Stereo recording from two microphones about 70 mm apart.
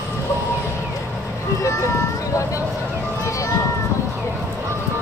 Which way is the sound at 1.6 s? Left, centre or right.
Left.